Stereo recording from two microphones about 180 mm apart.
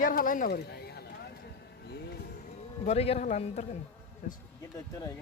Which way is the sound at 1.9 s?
60° left (ahead or behind).